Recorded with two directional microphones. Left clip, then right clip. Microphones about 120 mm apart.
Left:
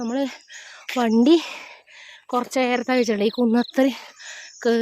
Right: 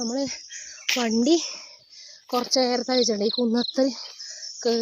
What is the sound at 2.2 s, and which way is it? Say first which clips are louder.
Speech: left 2 dB; 15° left (ahead or behind).